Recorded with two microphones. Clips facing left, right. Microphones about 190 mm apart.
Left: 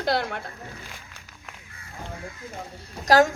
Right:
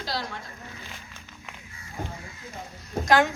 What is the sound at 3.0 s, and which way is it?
Speech, 40° left (ahead or behind).